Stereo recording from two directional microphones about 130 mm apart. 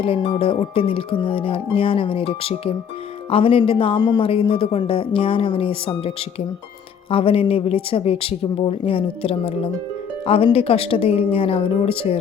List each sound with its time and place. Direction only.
0.0 s speech: 45° left (ahead or behind)